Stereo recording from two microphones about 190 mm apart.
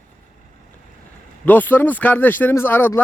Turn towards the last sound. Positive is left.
turn(degrees=10)  # may be behind; listen again after turning